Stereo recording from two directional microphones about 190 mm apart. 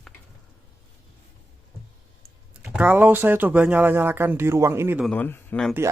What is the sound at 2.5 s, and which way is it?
Speech, 5° right (ahead or behind).